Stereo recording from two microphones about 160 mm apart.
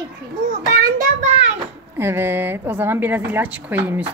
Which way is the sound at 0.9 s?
45° right (ahead or behind).